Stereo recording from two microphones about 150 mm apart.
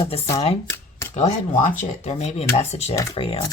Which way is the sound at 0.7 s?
15° left (ahead or behind).